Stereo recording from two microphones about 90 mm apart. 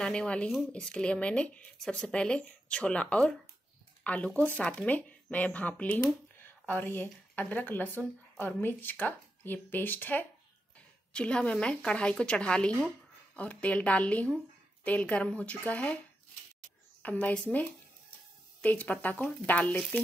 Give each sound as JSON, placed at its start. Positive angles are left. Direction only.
{"t": 0.0, "sound": "speech", "side_deg": 10}
{"t": 17.0, "sound": "speech", "side_deg": 20}
{"t": 18.6, "sound": "speech", "side_deg": 15}